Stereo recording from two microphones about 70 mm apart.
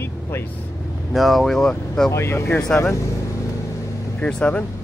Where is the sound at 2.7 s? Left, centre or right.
Centre.